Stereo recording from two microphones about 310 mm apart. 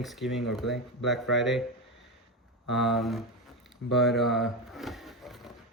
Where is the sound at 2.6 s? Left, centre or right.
Centre.